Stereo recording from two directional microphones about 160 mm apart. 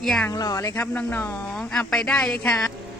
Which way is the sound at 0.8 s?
10° left (ahead or behind).